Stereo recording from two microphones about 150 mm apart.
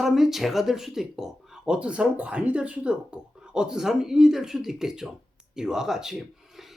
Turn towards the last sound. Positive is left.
turn(degrees=-5)  # may be behind; listen again after turning